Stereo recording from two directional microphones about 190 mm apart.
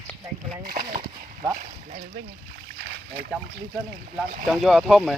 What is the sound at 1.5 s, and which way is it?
Speech, 40° right (ahead or behind).